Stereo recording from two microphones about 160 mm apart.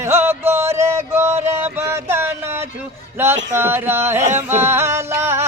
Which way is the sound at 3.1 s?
15° right (ahead or behind).